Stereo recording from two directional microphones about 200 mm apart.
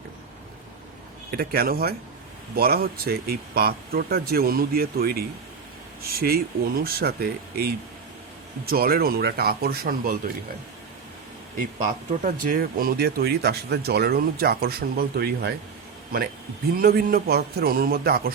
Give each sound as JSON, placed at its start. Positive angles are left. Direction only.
{"t": 1.3, "sound": "speech", "side_deg": -50}
{"t": 11.8, "sound": "speech", "side_deg": -40}
{"t": 16.7, "sound": "speech", "side_deg": -50}